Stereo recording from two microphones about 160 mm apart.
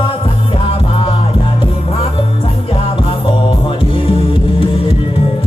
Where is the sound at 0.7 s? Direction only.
35° left (ahead or behind).